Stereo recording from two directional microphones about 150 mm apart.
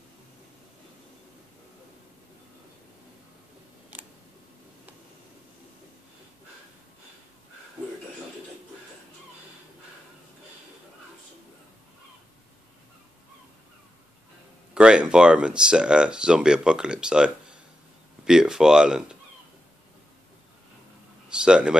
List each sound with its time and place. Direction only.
14.7 s speech: 5° right (ahead or behind)
21.3 s speech: 5° right (ahead or behind)